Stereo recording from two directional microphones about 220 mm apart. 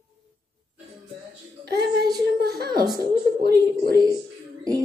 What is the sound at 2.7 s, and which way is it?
Speech, 20° right (ahead or behind).